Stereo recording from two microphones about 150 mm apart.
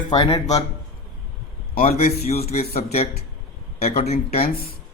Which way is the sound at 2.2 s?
45° left (ahead or behind).